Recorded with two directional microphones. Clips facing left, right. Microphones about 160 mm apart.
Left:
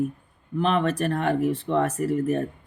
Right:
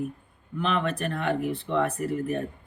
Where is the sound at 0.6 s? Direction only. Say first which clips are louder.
Left 4 dB; 40° left (ahead or behind).